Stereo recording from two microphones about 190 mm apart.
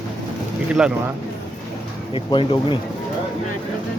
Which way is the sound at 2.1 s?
25° left (ahead or behind).